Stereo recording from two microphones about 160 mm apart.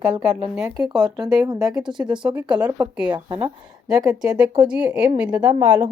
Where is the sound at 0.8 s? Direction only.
25° right (ahead or behind).